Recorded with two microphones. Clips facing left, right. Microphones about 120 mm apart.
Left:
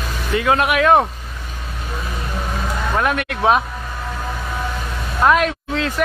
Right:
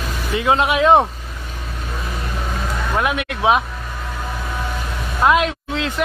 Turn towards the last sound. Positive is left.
turn(degrees=-20)  # may be behind; listen again after turning